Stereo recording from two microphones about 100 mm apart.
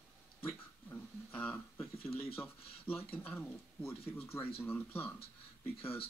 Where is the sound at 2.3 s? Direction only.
25° left (ahead or behind).